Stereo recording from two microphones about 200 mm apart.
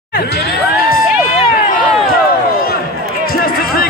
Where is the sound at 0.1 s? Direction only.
50° left (ahead or behind).